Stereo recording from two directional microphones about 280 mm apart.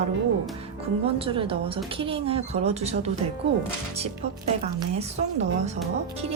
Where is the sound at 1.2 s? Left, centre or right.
Centre.